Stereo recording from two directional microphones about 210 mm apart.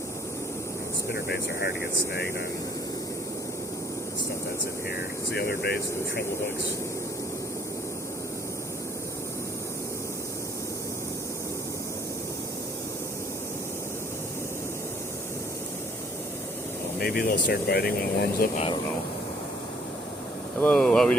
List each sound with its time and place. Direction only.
1.1 s speech: 50° left (ahead or behind)
5.3 s speech: 50° left (ahead or behind)
17.2 s speech: 45° left (ahead or behind)
20.6 s speech: 5° left (ahead or behind)